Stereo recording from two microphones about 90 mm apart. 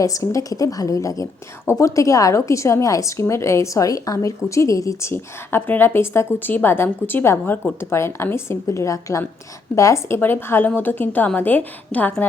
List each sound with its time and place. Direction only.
0.0 s a woman's voice: 40° left (ahead or behind)
10.2 s a woman's voice: 25° left (ahead or behind)